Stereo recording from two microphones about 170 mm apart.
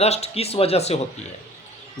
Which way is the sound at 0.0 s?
40° left (ahead or behind).